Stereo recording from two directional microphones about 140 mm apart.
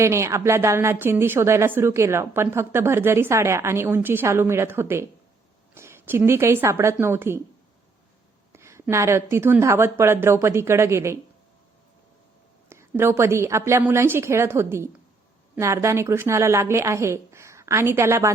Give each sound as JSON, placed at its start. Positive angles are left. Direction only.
{"t": 0.0, "sound": "a woman's voice", "side_deg": -20}
{"t": 8.5, "sound": "a woman's voice", "side_deg": -20}
{"t": 12.6, "sound": "a woman's voice", "side_deg": -20}